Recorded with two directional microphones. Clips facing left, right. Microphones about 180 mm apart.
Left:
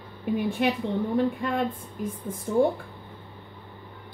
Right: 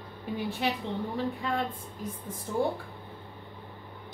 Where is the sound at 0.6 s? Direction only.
55° left (ahead or behind).